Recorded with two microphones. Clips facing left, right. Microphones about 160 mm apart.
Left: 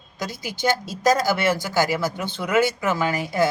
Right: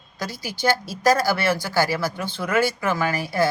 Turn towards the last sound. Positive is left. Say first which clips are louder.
# left 1 dB
turn(degrees=20)  # may be behind; listen again after turning